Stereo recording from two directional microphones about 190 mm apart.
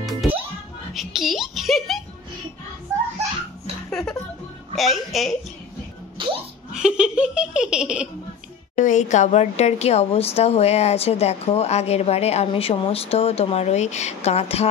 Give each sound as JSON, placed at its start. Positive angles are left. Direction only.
{"t": 0.0, "sound": "music", "side_deg": 0}
{"t": 0.9, "sound": "a child's voice", "side_deg": 0}
{"t": 4.7, "sound": "laughter", "side_deg": 0}
{"t": 6.1, "sound": "music", "side_deg": -25}
{"t": 6.7, "sound": "laughter", "side_deg": -5}
{"t": 8.7, "sound": "speech", "side_deg": 40}